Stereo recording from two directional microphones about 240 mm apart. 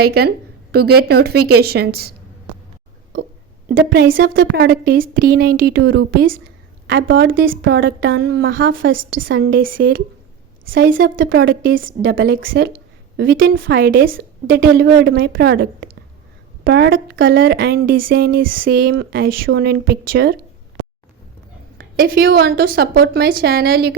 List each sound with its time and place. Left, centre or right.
0.0 s a woman's voice: right
3.8 s a woman's voice: right
9.2 s a woman's voice: right
10.7 s a woman's voice: right
12.0 s a woman's voice: right
21.9 s a woman's voice: right